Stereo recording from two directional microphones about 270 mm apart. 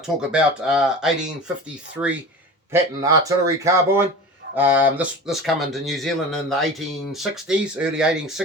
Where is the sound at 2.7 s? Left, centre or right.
Centre.